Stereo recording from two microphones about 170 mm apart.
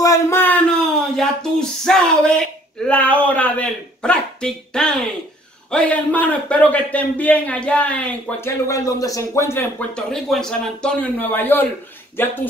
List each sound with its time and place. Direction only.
0.0 s a sound: 15° left (ahead or behind)
1.1 s speech: 5° left (ahead or behind)
8.6 s speech: 20° left (ahead or behind)